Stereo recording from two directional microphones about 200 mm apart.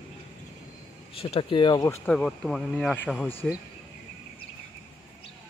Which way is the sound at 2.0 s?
5° left (ahead or behind).